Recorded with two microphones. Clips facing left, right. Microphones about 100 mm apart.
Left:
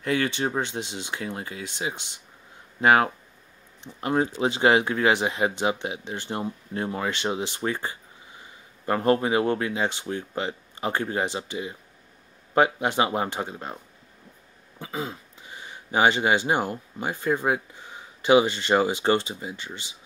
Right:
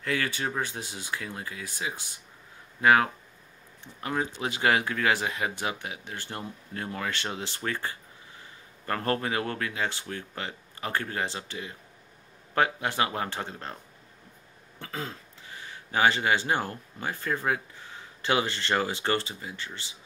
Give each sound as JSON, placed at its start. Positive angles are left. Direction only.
{"t": 0.0, "sound": "speech", "side_deg": 20}
{"t": 14.8, "sound": "speech", "side_deg": 15}